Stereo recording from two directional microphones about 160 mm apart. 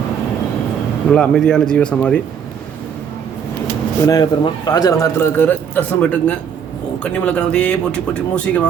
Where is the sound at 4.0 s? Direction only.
20° left (ahead or behind).